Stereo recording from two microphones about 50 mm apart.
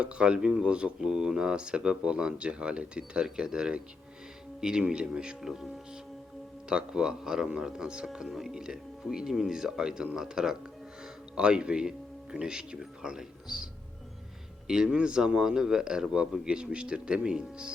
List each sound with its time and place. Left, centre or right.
0.0 s speech: right
6.7 s speech: centre
14.7 s speech: centre